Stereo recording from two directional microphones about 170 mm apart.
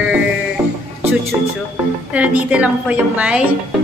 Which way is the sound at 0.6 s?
10° right (ahead or behind).